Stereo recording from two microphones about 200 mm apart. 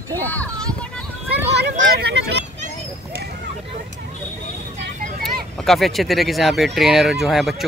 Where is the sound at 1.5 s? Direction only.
55° right (ahead or behind).